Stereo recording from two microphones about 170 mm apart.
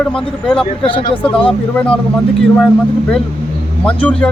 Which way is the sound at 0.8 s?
30° left (ahead or behind).